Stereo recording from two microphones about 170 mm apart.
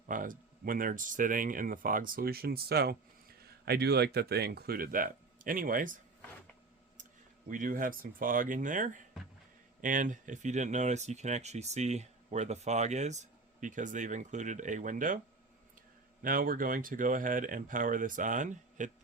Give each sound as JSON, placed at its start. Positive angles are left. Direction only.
{"t": 0.1, "sound": "speech", "side_deg": -55}
{"t": 16.2, "sound": "speech", "side_deg": -55}